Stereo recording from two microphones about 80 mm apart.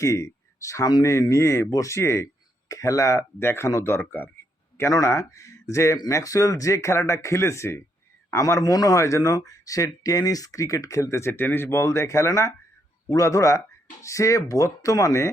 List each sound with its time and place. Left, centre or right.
0.0 s speech: left
3.4 s speech: left
4.8 s speech: left
11.3 s speech: left